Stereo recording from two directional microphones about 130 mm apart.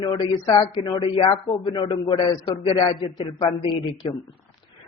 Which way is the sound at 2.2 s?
45° left (ahead or behind).